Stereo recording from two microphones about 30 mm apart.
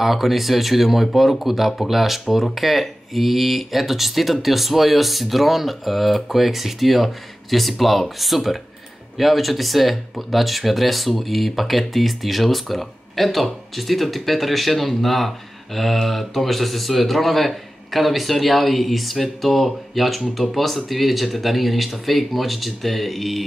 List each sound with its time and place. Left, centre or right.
0.0 s speech: centre